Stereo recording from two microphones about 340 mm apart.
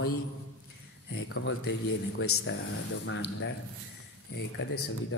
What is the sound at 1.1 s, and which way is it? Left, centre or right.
Speech, left.